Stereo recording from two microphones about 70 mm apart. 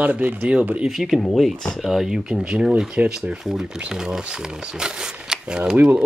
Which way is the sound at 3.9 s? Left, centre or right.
Centre.